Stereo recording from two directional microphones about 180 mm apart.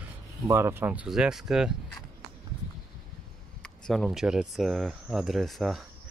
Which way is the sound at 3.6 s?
5° left (ahead or behind).